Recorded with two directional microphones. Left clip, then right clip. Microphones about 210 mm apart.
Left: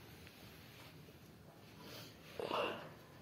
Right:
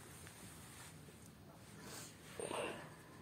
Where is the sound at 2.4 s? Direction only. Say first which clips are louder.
Left 4 dB; 10° left (ahead or behind).